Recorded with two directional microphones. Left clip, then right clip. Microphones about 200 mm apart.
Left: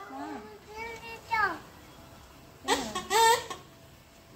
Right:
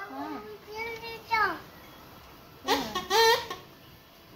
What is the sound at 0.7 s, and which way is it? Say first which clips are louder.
Child singing: right 3 dB; centre (ahead or behind).